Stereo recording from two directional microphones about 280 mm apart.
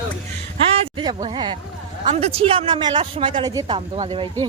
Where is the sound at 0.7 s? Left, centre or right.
Centre.